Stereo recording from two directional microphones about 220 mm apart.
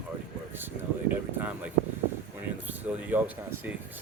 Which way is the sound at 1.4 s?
5° right (ahead or behind).